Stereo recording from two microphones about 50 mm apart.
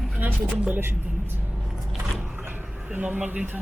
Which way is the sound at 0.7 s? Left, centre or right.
Right.